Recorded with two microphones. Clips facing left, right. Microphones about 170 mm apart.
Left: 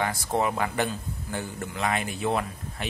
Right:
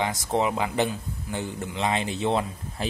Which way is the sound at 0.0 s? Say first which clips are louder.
Right 1 dB; 20° right (ahead or behind).